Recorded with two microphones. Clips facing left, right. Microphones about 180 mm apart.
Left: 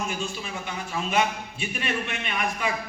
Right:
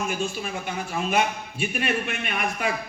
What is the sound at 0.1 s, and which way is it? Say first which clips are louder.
A man's voice: right 4 dB; 50° right (ahead or behind).